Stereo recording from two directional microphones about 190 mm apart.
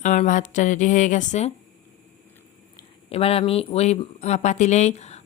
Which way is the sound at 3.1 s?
30° left (ahead or behind).